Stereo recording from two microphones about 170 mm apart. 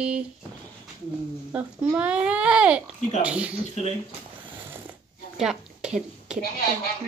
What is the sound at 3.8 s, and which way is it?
Speech, 40° left (ahead or behind).